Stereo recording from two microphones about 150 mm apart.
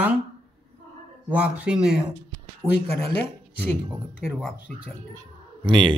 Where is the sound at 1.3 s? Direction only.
10° right (ahead or behind).